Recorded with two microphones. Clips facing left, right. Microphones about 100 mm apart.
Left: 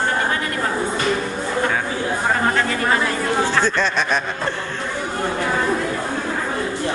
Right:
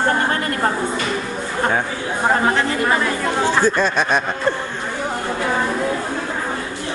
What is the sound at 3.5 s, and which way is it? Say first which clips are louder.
Speech: right 2 dB; 10° right (ahead or behind).